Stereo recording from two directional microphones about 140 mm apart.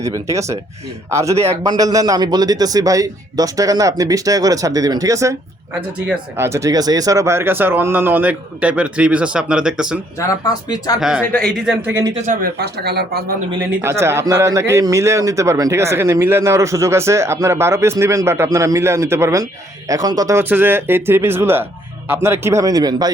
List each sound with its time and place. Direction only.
0.0 s a man's voice: 20° right (ahead or behind); by 10.0 s 5° right (ahead or behind)
10.2 s speech: 25° left (ahead or behind)
11.2 s speech: 10° left (ahead or behind)
11.9 s speech: 20° right (ahead or behind)
12.2 s speech: 75° right (ahead or behind)
13.8 s a man's voice: 20° right (ahead or behind)